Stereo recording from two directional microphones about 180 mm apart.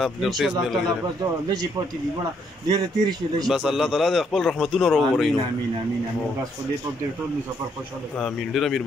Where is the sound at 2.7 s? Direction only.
20° right (ahead or behind).